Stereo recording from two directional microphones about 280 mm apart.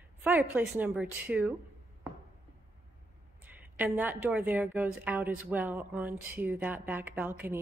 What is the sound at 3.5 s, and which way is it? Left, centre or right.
A woman's voice, centre.